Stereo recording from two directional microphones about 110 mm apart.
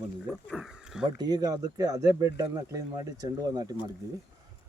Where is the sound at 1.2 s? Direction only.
35° right (ahead or behind).